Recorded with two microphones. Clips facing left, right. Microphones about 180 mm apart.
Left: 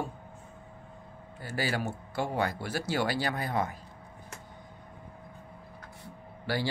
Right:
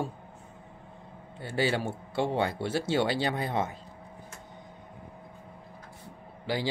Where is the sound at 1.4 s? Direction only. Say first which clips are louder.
Right 4 dB; 25° right (ahead or behind).